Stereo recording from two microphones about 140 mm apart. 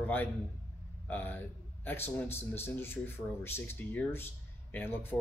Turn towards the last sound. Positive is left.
turn(degrees=15)  # may be behind; listen again after turning